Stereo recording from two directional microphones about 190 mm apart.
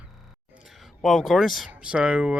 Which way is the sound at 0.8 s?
Centre (ahead or behind).